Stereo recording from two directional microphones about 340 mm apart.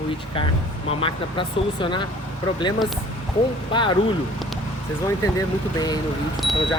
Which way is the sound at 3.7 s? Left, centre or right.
Centre.